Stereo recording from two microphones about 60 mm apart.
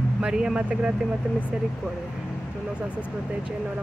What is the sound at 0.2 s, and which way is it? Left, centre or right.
Speech, centre.